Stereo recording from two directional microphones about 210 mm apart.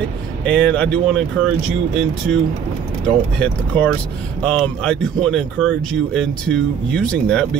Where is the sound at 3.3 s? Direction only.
5° left (ahead or behind).